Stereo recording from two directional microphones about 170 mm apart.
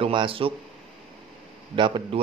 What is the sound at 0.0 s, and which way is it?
Speech, 30° right (ahead or behind).